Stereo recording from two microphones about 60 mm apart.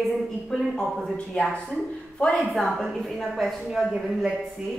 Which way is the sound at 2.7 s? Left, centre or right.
Centre.